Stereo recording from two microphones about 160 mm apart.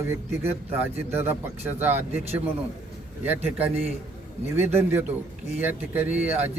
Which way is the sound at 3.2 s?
10° right (ahead or behind).